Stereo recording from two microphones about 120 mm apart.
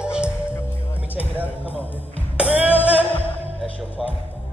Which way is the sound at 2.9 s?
55° left (ahead or behind).